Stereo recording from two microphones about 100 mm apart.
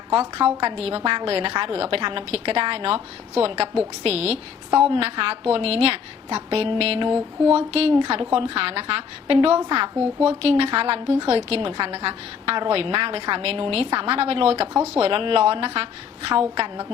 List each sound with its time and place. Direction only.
0.1 s a woman's voice: 70° right (ahead or behind)
7.5 s speech: 85° right
7.9 s a woman's voice: 60° right (ahead or behind)
10.2 s a woman's voice: 80° right
14.9 s a woman's voice: 70° right (ahead or behind)